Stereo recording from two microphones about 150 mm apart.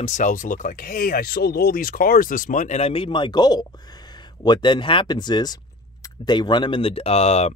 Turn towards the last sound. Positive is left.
turn(degrees=45)  # may be behind; listen again after turning